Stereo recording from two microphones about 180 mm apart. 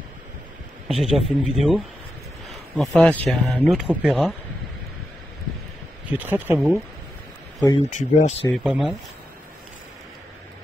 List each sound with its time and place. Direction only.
0.8 s speech: centre (ahead or behind)
2.8 s speech: 5° left (ahead or behind)
6.0 s speech: 10° right (ahead or behind)
7.9 s speech: 40° left (ahead or behind)
8.6 s speech: centre (ahead or behind)